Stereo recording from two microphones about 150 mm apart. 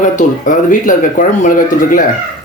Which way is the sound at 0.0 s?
60° left (ahead or behind).